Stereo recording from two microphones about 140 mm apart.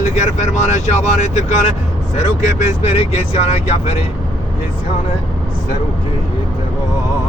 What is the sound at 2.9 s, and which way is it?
Speech, 50° left (ahead or behind).